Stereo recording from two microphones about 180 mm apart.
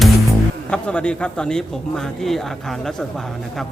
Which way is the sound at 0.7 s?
5° left (ahead or behind).